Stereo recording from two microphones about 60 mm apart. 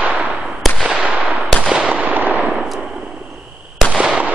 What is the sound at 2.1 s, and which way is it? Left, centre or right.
Fireworks, right.